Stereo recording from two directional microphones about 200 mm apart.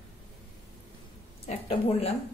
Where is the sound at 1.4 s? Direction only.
30° left (ahead or behind).